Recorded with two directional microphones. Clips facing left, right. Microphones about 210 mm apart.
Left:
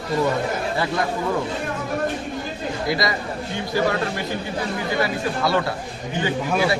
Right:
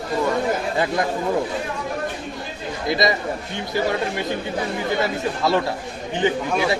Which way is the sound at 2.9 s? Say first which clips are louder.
Right 4 dB; 20° right (ahead or behind).